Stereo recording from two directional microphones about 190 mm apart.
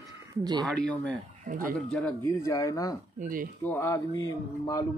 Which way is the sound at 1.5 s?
45° right (ahead or behind).